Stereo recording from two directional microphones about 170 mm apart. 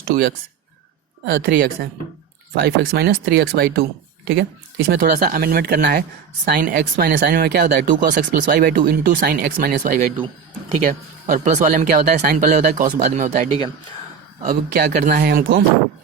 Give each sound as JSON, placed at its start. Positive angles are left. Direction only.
{"t": 1.2, "sound": "speech", "side_deg": -65}
{"t": 6.5, "sound": "speech", "side_deg": -55}